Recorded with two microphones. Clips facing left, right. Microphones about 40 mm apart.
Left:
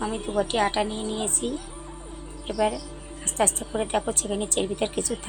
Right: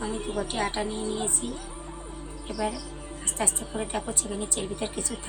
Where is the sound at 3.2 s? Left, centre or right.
Left.